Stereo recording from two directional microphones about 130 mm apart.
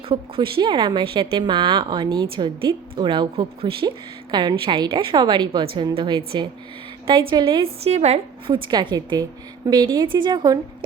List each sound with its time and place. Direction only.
0.1 s speech: 40° right (ahead or behind)
2.3 s a woman's voice: 40° right (ahead or behind)
7.3 s a woman's voice: 40° right (ahead or behind); by 8.5 s 55° right (ahead or behind)
8.5 s speech: 40° right (ahead or behind)